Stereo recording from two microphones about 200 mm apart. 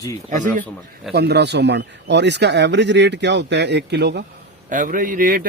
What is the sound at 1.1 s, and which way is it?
A man's voice, 55° right (ahead or behind).